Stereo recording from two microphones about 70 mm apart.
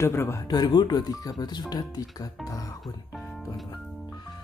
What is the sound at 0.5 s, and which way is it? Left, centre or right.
Speech, left.